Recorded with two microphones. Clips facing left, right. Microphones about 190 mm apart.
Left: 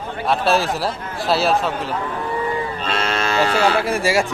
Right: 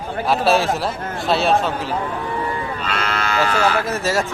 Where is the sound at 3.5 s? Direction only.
35° left (ahead or behind).